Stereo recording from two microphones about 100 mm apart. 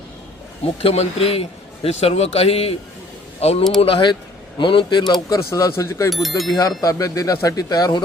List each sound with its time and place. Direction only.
0.6 s a man's voice: 75° left (ahead or behind)
3.8 s speech: 65° left (ahead or behind); by 5.1 s 50° left (ahead or behind)
5.5 s speech: 30° left (ahead or behind)
6.1 s speech: centre (ahead or behind)
6.6 s speech: 30° left (ahead or behind)